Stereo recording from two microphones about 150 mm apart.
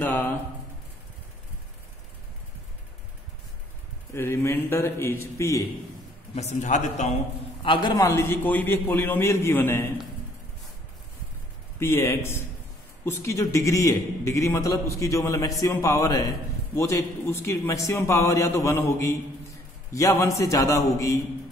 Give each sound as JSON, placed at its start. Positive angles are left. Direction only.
{"t": 0.0, "sound": "a sound", "side_deg": 15}
{"t": 4.1, "sound": "a man's voice", "side_deg": 15}
{"t": 6.3, "sound": "a man's voice", "side_deg": 50}
{"t": 7.6, "sound": "a man's voice", "side_deg": 30}
{"t": 11.8, "sound": "a man's voice", "side_deg": 20}